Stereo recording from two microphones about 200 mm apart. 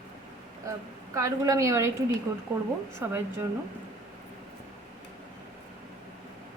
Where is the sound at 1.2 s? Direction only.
15° right (ahead or behind).